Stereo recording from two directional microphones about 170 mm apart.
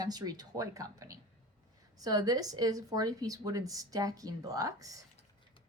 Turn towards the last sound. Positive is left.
turn(degrees=-20)  # may be behind; listen again after turning